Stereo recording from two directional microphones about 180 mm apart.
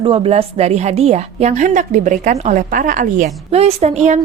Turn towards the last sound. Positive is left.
turn(degrees=-40)  # may be behind; listen again after turning